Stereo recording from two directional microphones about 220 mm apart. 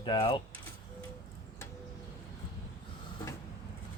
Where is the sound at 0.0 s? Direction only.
20° left (ahead or behind).